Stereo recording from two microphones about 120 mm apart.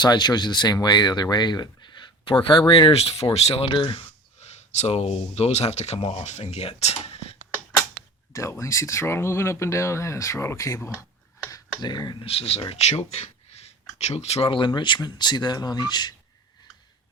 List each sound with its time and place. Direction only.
0.0 s speech: 35° left (ahead or behind)
4.4 s speech: 65° left (ahead or behind)
8.3 s speech: 25° left (ahead or behind)
11.5 s speech: 35° left (ahead or behind)
12.2 s speech: 55° left (ahead or behind); by 16.1 s 35° left (ahead or behind)